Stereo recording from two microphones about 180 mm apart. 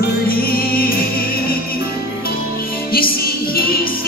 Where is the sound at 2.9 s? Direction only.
55° left (ahead or behind).